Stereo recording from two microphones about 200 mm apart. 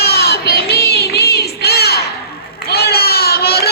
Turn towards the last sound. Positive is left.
turn(degrees=50)  # may be behind; listen again after turning